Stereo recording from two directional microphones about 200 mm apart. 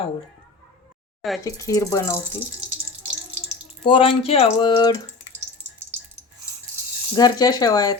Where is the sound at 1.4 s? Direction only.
15° left (ahead or behind).